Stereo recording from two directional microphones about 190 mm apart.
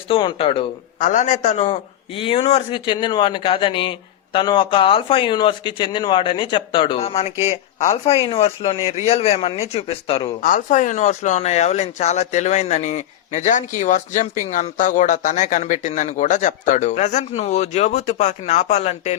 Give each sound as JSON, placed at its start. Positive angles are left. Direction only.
{"t": 0.1, "sound": "speech", "side_deg": 25}
{"t": 0.9, "sound": "speech", "side_deg": 40}
{"t": 10.4, "sound": "speech", "side_deg": 45}